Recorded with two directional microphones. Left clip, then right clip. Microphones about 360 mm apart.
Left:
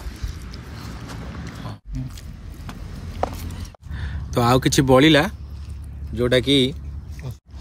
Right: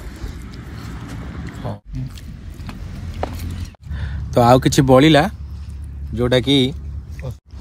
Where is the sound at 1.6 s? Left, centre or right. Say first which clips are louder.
Right 8 dB; centre.